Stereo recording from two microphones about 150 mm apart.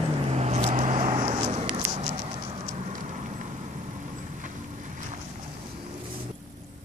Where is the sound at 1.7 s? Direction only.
45° right (ahead or behind).